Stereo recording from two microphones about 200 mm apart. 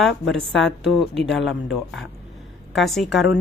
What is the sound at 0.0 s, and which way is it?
A woman's voice, centre (ahead or behind).